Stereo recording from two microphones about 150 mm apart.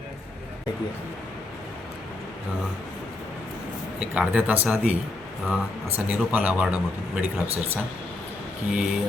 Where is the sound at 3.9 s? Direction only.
5° right (ahead or behind).